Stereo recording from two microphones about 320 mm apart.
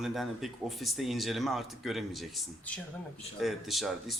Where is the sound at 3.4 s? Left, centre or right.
Centre.